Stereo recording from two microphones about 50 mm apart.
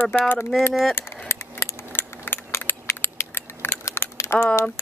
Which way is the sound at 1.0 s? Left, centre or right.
Left.